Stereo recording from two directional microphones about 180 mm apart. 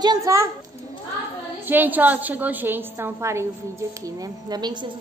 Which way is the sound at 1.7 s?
10° right (ahead or behind).